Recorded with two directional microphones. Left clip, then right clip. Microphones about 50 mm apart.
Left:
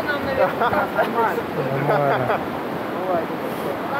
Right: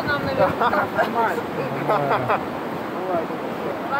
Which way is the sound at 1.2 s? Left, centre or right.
Right.